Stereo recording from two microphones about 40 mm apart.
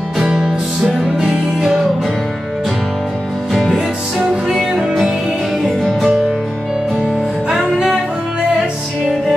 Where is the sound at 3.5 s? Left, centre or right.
Centre.